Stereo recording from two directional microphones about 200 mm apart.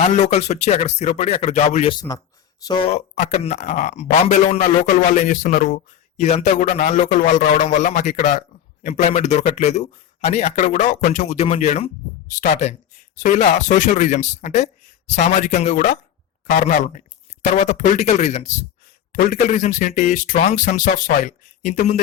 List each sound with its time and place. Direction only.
0.3 s speech: 35° left (ahead or behind)